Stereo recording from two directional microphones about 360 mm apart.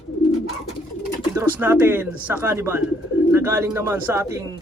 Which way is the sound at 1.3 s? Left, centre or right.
Centre.